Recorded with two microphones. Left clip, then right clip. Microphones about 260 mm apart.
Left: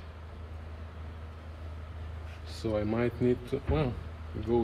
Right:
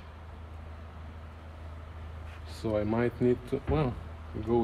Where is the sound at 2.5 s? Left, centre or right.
Right.